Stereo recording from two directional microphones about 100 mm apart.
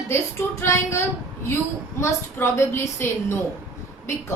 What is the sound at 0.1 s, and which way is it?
A woman's voice, 30° left (ahead or behind).